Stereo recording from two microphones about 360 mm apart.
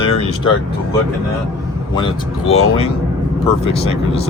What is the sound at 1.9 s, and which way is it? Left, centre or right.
Speech, centre.